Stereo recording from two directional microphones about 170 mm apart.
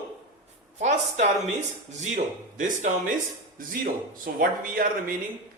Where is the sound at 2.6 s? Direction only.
45° right (ahead or behind).